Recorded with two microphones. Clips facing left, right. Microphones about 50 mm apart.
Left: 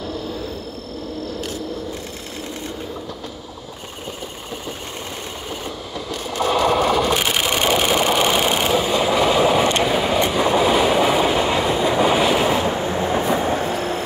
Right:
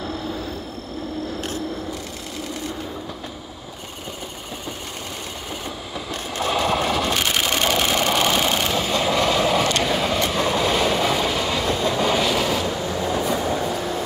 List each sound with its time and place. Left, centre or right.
6.5 s sewing machine: centre
7.1 s sewing machine: centre
9.8 s train: centre; by 14.0 s left